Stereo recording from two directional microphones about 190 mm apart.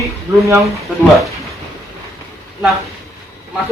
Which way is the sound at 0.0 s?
15° right (ahead or behind).